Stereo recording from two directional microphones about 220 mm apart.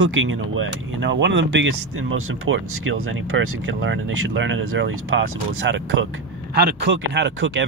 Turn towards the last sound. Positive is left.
turn(degrees=-55)  # may be behind; listen again after turning